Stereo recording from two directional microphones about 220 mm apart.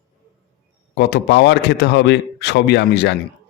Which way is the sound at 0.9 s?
50° left (ahead or behind).